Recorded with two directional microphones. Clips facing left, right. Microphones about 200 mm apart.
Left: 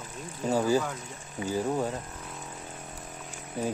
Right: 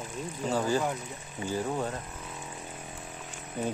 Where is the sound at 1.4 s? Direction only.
10° left (ahead or behind).